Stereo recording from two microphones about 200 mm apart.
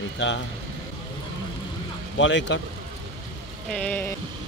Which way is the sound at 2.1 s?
65° left (ahead or behind).